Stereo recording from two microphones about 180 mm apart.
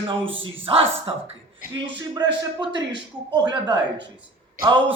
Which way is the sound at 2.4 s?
25° right (ahead or behind).